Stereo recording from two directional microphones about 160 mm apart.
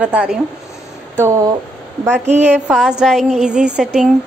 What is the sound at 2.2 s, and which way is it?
Speech, 45° right (ahead or behind).